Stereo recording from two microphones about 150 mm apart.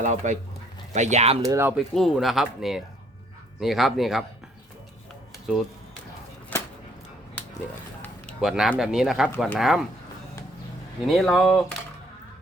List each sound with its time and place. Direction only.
0.0 s speech: 55° right (ahead or behind)
1.5 s speech: 15° right (ahead or behind)
1.7 s speech: centre (ahead or behind)
6.5 s a sound: 15° left (ahead or behind)
8.4 s speech: centre (ahead or behind)
11.0 s speech: centre (ahead or behind)